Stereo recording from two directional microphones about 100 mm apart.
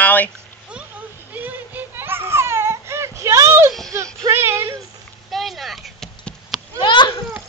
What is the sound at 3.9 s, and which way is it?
Speech, 30° right (ahead or behind).